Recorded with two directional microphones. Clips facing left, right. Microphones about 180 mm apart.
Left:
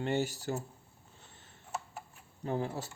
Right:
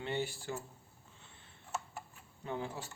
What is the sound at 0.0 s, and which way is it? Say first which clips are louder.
Speech: left 5 dB; 45° left (ahead or behind).